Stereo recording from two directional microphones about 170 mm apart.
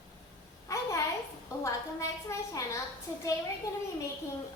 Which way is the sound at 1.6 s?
15° left (ahead or behind).